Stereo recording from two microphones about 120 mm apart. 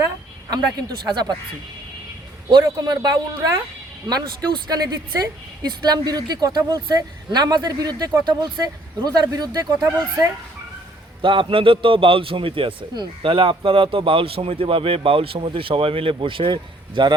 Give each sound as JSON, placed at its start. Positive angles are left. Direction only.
{"t": 0.5, "sound": "speech", "side_deg": -35}
{"t": 2.5, "sound": "speech", "side_deg": -35}
{"t": 11.2, "sound": "a man's voice", "side_deg": -45}